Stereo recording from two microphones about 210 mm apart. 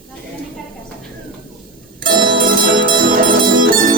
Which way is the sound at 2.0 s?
45° right (ahead or behind).